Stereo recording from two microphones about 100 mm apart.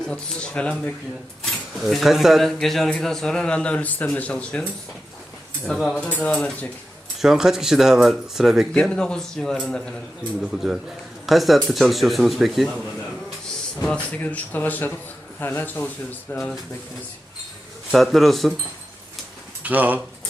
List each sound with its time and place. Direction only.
0.0 s speech: 10° left (ahead or behind)
1.5 s speech: centre (ahead or behind)
7.2 s speech: 5° right (ahead or behind)
8.7 s speech: 10° left (ahead or behind)
13.8 s speech: 10° left (ahead or behind)
17.9 s speech: centre (ahead or behind)
19.6 s speech: 15° right (ahead or behind)